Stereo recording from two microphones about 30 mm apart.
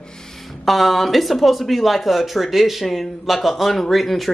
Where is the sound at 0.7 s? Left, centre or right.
Centre.